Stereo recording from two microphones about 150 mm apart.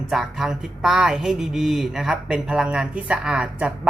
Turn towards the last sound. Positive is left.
turn(degrees=-5)  # may be behind; listen again after turning